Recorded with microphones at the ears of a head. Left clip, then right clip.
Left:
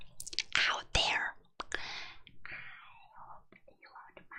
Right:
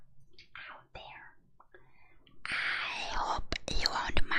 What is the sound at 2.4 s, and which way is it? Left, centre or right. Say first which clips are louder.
Whispering: right 15 dB; right.